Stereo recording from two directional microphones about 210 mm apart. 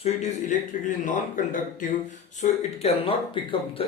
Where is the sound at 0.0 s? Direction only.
35° left (ahead or behind).